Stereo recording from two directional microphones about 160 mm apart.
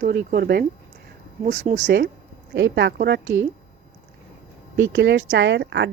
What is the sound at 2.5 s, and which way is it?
Speech, 90° right.